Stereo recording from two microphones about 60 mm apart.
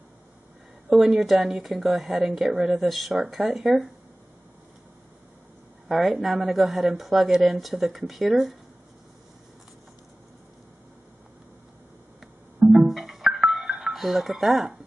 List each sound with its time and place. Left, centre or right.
0.8 s a woman's voice: centre
5.9 s speech: centre
12.2 s telephone dialing: centre
13.4 s music: centre